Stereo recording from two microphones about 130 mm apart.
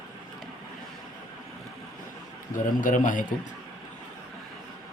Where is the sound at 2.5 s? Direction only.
90° left.